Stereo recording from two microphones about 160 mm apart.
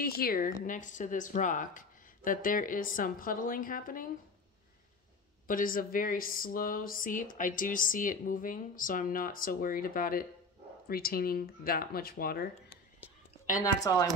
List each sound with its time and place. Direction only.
0.0 s speech: 65° left (ahead or behind)
5.5 s speech: 60° left (ahead or behind)
13.6 s speech: 20° left (ahead or behind)